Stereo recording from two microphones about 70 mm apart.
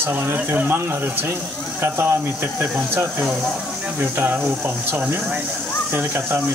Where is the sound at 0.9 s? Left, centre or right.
Right.